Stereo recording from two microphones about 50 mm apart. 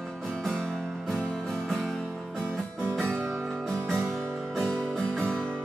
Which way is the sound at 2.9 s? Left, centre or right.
Centre.